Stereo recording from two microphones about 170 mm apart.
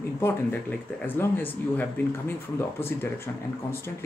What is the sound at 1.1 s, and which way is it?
Speech, 10° left (ahead or behind).